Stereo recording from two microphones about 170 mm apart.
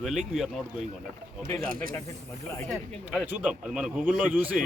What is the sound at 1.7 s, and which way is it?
Speech, 55° right (ahead or behind).